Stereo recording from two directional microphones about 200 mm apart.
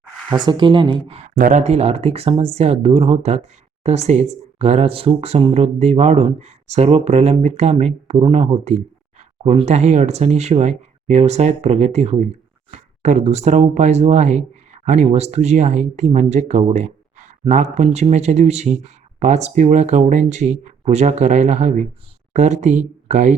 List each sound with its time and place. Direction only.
0.3 s speech: 20° right (ahead or behind)